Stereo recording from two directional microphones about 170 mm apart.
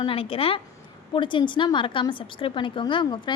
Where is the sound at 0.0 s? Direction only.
35° left (ahead or behind).